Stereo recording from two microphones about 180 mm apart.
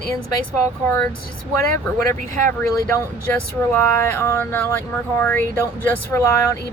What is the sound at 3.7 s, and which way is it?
Speech, 15° left (ahead or behind).